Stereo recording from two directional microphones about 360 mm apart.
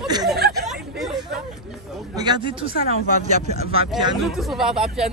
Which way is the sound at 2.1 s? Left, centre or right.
Centre.